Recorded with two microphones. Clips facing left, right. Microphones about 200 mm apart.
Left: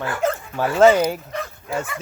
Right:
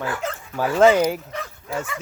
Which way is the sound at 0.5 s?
10° right (ahead or behind).